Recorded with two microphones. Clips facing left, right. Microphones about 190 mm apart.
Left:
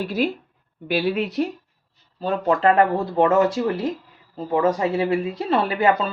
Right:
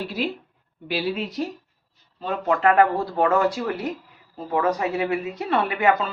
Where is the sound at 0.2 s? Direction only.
45° left (ahead or behind).